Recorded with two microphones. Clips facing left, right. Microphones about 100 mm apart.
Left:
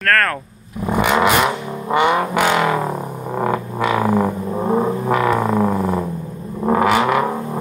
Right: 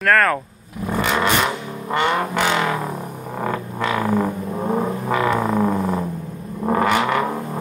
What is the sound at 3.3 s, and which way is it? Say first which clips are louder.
Vehicle: left 4 dB; 15° left (ahead or behind).